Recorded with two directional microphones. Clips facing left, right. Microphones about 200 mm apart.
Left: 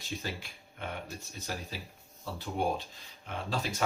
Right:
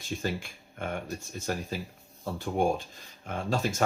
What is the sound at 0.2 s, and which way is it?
Speech, 50° right (ahead or behind).